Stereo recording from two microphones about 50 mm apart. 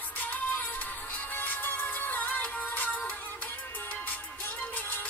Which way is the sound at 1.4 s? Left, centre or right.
Left.